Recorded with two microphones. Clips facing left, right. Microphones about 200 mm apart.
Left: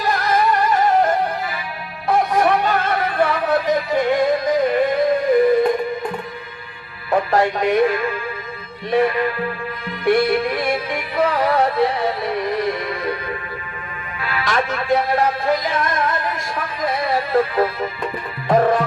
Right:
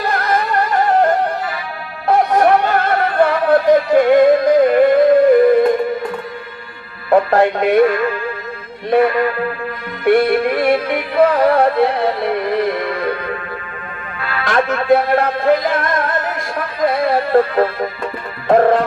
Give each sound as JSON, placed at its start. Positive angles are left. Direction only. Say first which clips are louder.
{"t": 0.0, "sound": "music", "louder": "even", "side_deg": -60}
{"t": 7.1, "sound": "speech", "louder": "right 5 dB", "side_deg": -60}
{"t": 8.9, "sound": "music", "louder": "right 4 dB", "side_deg": -60}
{"t": 14.4, "sound": "music", "louder": "right 6 dB", "side_deg": -60}